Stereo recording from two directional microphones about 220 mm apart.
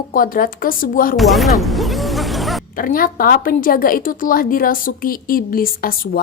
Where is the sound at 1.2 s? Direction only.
Centre (ahead or behind).